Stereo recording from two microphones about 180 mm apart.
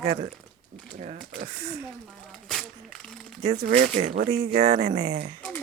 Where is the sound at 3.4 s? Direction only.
45° right (ahead or behind).